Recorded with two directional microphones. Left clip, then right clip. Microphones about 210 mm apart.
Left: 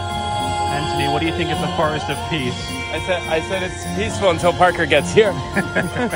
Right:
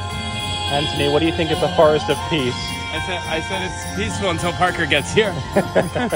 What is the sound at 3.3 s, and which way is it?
Speech, centre (ahead or behind).